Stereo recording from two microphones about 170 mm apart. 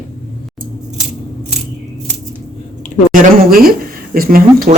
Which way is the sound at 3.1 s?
55° right (ahead or behind).